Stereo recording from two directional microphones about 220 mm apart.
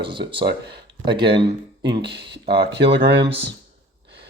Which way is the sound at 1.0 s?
20° right (ahead or behind).